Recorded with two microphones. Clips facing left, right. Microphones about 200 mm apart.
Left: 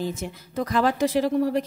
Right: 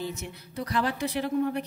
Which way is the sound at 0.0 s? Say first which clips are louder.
Left 5 dB; 90° left.